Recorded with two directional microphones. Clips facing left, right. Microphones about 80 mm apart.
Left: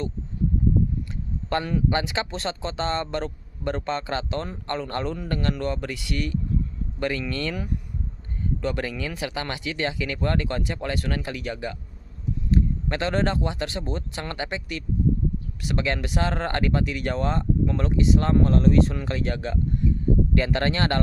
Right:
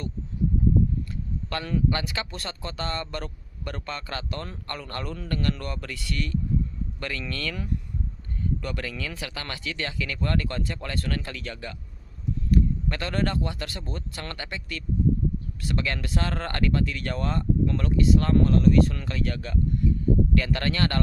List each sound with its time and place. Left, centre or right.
1.5 s speech: left